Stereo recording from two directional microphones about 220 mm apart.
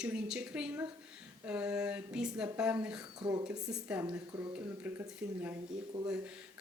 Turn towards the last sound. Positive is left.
turn(degrees=-5)  # may be behind; listen again after turning